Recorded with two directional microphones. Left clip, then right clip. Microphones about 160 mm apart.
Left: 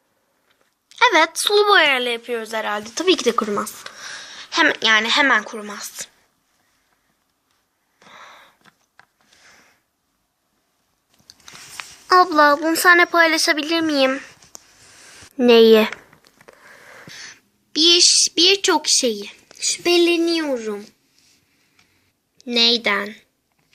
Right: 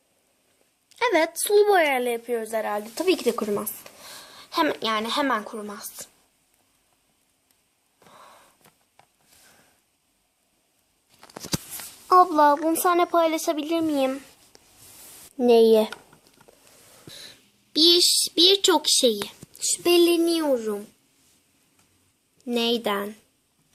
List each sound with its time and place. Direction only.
0.9 s a woman's voice: 20° right (ahead or behind); by 2.7 s 5° right (ahead or behind)
3.0 s speech: 20° left (ahead or behind)
4.3 s speech: centre (ahead or behind)
8.1 s a sound: centre (ahead or behind)
12.1 s a child's voice: 45° left (ahead or behind)
13.1 s a woman's voice: centre (ahead or behind)
15.4 s a woman's voice: 15° left (ahead or behind)
22.4 s a woman's voice: 10° right (ahead or behind)